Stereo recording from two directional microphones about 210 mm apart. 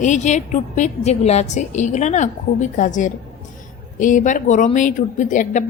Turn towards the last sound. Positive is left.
turn(degrees=35)  # may be behind; listen again after turning